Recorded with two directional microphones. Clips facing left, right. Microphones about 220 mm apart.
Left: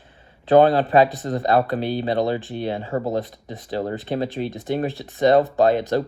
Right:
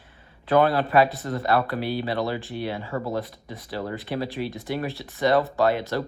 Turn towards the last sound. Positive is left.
turn(degrees=20)  # may be behind; listen again after turning